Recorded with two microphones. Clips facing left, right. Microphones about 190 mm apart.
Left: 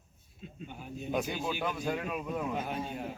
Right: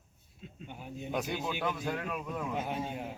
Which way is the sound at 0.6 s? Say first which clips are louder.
Left 1 dB; 20° right (ahead or behind).